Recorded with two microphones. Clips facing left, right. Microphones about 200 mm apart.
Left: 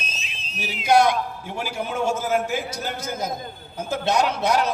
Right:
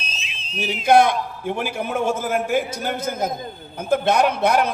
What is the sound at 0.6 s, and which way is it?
A man's voice, 55° right (ahead or behind).